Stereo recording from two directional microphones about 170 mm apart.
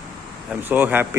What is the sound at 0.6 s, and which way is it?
Speech, 10° right (ahead or behind).